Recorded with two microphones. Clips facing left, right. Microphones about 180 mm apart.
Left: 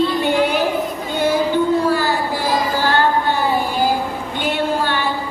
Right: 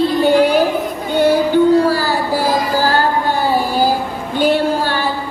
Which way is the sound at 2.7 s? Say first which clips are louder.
Right 2 dB; 40° right (ahead or behind).